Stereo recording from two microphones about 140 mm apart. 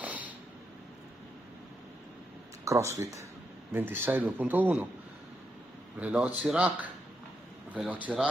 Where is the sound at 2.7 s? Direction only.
20° right (ahead or behind).